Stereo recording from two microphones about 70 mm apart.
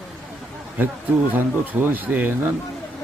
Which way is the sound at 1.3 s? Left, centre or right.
Right.